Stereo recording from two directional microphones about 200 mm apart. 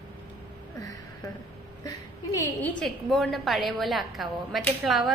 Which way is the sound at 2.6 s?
Centre (ahead or behind).